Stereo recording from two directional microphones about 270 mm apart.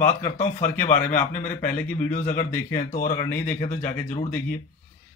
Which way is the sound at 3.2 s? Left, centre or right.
Centre.